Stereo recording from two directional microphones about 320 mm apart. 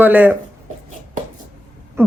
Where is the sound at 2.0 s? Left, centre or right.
Centre.